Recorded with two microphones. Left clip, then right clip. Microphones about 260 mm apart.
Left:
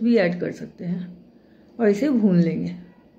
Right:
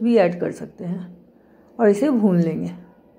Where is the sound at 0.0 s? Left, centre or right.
Centre.